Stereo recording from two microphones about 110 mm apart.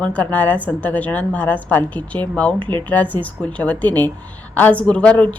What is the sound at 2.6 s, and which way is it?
Speech, 45° right (ahead or behind).